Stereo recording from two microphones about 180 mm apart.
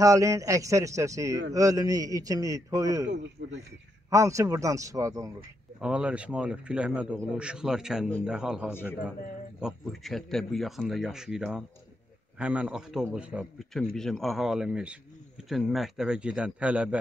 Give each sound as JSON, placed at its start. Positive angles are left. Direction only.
{"t": 0.0, "sound": "a man's voice", "side_deg": -15}
{"t": 3.1, "sound": "a man's voice", "side_deg": -80}
{"t": 4.1, "sound": "a man's voice", "side_deg": -15}
{"t": 5.8, "sound": "a man's voice", "side_deg": -5}